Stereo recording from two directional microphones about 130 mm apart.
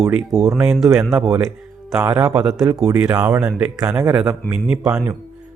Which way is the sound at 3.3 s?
25° right (ahead or behind).